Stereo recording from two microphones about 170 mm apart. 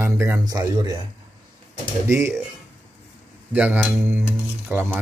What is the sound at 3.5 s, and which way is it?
Speech, 10° right (ahead or behind).